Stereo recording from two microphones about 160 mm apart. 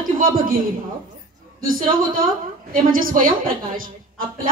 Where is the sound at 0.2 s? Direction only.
65° right (ahead or behind).